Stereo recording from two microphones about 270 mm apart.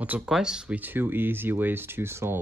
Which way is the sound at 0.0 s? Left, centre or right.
Centre.